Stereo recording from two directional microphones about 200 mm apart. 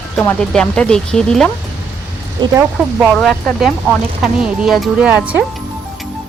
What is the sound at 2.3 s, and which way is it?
Speech, 20° right (ahead or behind).